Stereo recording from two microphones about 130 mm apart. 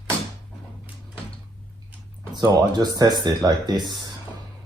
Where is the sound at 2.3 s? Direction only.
35° right (ahead or behind).